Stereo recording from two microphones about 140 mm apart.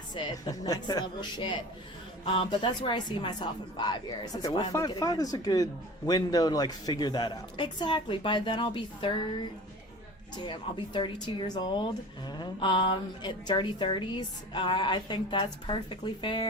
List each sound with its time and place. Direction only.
0.1 s a woman's voice: 30° left (ahead or behind)